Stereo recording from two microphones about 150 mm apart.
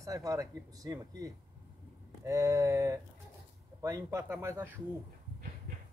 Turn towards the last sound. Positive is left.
turn(degrees=-15)  # may be behind; listen again after turning